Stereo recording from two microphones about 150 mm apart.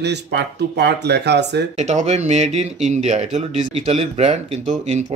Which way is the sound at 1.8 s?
50° right (ahead or behind).